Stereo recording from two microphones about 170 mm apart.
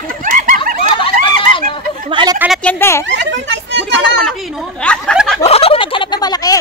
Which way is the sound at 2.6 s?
15° left (ahead or behind).